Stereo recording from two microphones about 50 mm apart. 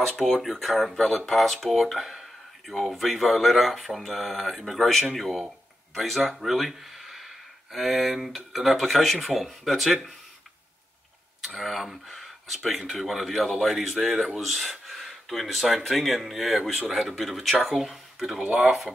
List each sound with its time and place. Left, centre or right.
0.2 s speech: centre
11.4 s speech: centre